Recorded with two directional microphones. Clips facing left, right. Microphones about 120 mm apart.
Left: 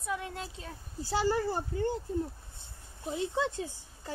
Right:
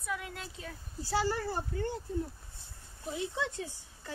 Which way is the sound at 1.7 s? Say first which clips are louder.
Left 4 dB; 30° left (ahead or behind).